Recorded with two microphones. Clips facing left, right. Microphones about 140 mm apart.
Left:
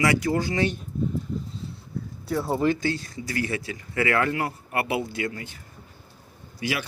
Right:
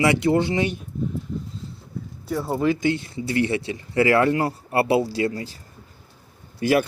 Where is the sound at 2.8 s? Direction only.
20° right (ahead or behind).